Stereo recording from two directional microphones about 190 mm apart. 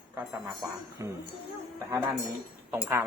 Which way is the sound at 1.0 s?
15° right (ahead or behind).